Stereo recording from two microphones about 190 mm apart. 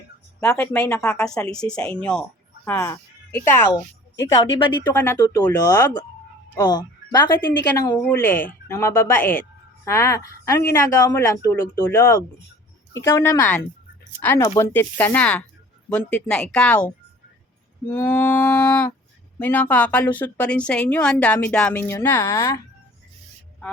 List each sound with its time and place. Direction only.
0.3 s speech: 10° left (ahead or behind)
1.5 s speech: 5° left (ahead or behind)
4.5 s speech: 25° left (ahead or behind)
4.9 s speech: 15° left (ahead or behind)